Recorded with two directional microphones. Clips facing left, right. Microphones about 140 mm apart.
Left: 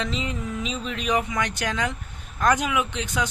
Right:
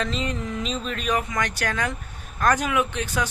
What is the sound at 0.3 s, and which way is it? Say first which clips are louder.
Speech: right 1 dB; 10° left (ahead or behind).